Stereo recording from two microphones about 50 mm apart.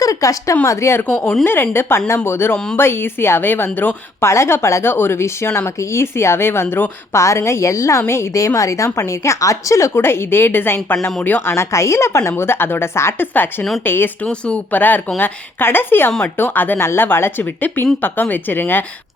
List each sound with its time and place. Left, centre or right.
0.2 s a woman's voice: left
0.6 s a woman's voice: left
1.5 s a woman's voice: left
4.2 s a woman's voice: left
4.9 s a woman's voice: left
7.1 s a woman's voice: left
8.0 s a woman's voice: left
9.9 s speech: left
11.5 s a woman's voice: left
12.4 s speech: left
13.3 s speech: left
17.4 s speech: left